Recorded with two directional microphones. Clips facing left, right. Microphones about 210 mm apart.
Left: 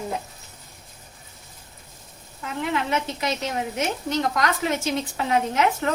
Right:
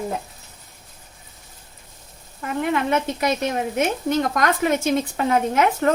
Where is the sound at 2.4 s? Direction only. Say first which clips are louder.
Right 4 dB; 50° right (ahead or behind).